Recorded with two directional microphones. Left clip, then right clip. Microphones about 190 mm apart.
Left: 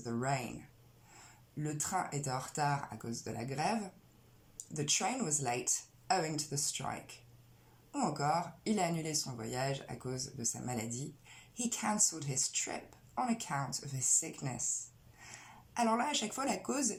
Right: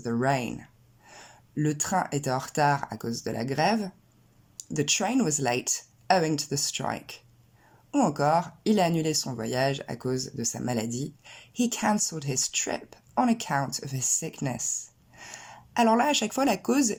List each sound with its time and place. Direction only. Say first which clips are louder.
0.0 s speech: right 10 dB; 45° right (ahead or behind)
1.6 s speech: right 9 dB; 45° right (ahead or behind)